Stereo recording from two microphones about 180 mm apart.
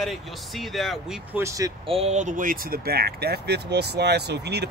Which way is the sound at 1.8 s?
35° right (ahead or behind).